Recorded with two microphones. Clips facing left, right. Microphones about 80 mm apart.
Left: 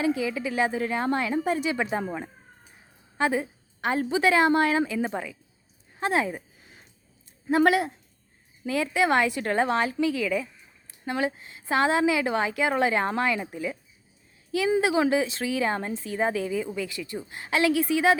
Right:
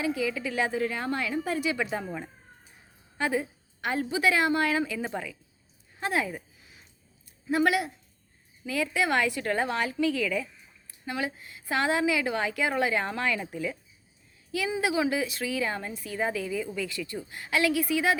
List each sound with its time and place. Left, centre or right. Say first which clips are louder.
0.0 s speech: left 3 dB; left
3.2 s speech: left 3 dB; left
7.4 s speech: left 4 dB; left
11.0 s speech: left 5 dB; left
14.8 s speech: left 3 dB; left